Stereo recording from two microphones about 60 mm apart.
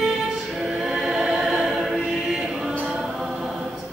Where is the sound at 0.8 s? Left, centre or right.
Centre.